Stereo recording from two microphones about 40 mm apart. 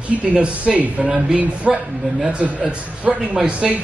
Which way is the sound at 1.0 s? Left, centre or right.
Right.